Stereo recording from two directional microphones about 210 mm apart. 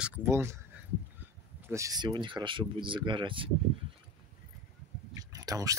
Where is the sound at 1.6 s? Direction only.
15° right (ahead or behind).